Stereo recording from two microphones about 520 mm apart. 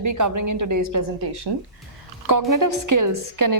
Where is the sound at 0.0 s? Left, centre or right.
Right.